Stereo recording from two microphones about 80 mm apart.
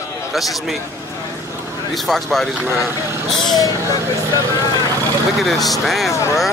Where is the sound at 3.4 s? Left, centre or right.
Left.